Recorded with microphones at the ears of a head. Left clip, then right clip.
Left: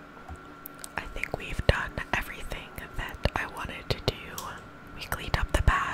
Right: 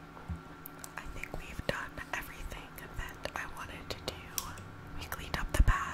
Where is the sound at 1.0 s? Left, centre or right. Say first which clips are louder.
Left 11 dB; left.